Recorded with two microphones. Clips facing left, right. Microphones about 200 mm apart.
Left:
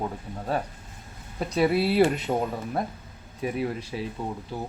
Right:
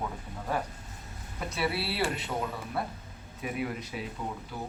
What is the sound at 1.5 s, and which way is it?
Speech, 45° left (ahead or behind).